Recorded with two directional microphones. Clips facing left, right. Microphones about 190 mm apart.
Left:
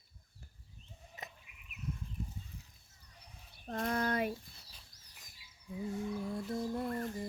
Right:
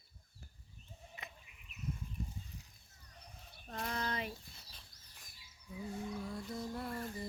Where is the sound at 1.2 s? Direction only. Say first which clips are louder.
Left 5 dB; 40° left (ahead or behind).